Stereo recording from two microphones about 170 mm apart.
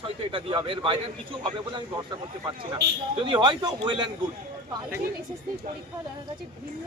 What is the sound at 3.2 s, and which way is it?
Speech, 25° right (ahead or behind).